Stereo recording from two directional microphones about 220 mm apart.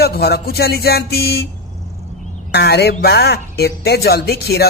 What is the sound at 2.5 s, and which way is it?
Speech, 50° left (ahead or behind).